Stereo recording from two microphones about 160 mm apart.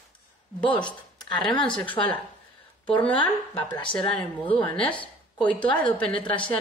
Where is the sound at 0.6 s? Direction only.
30° left (ahead or behind).